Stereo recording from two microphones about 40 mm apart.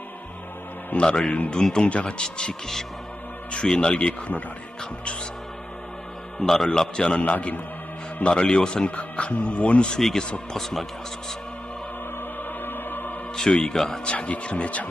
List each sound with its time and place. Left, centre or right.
0.9 s speech: left
1.5 s speech: centre
1.9 s speech: left
2.1 s speech: centre
3.5 s speech: left
6.4 s speech: centre
6.7 s speech: left
7.2 s speech: left
8.2 s speech: left
10.5 s speech: centre
12.6 s opera: left
13.5 s speech: left
14.0 s speech: left